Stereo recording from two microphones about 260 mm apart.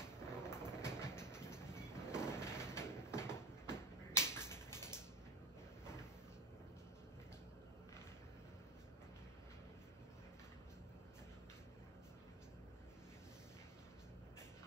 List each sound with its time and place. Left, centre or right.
0.4 s train: centre